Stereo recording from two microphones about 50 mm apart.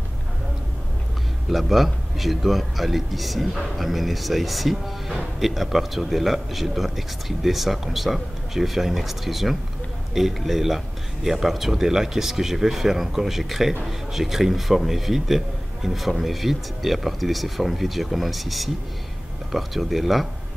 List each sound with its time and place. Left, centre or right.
1.5 s a man's voice: centre